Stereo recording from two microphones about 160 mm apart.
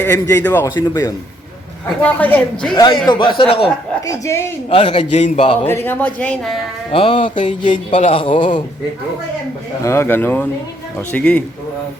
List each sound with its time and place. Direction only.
0.0 s a man's voice: 10° left (ahead or behind)
2.0 s speech: 10° left (ahead or behind)
2.7 s a man's voice: 25° left (ahead or behind)
4.0 s speech: 20° left (ahead or behind)
4.7 s a man's voice: 35° left (ahead or behind)
5.6 s speech: 15° left (ahead or behind)
6.9 s a man's voice: 35° left (ahead or behind)
7.2 s music: 50° left (ahead or behind)
7.9 s a man's voice: 35° left (ahead or behind)
9.8 s speech: 15° left (ahead or behind)